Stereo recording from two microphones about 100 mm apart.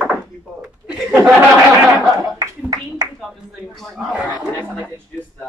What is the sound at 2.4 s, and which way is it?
Speech, 40° right (ahead or behind).